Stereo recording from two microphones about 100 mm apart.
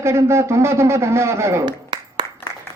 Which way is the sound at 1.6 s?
50° right (ahead or behind).